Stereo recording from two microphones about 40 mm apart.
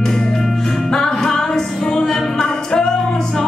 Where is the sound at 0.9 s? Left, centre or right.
Centre.